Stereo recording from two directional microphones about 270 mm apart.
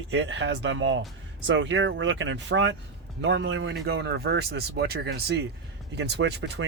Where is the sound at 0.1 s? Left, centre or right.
Right.